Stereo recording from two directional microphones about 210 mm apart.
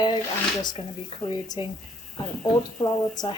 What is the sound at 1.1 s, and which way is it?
Speech, 25° left (ahead or behind).